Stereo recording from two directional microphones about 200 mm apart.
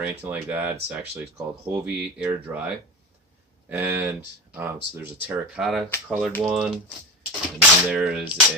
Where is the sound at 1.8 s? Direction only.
5° right (ahead or behind).